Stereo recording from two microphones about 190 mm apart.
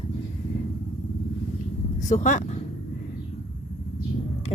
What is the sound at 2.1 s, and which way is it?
Speech, 40° left (ahead or behind).